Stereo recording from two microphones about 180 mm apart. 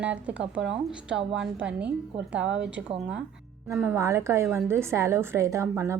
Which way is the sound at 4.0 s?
15° right (ahead or behind).